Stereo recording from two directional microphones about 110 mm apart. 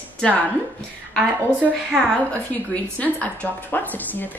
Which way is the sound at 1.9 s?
10° left (ahead or behind).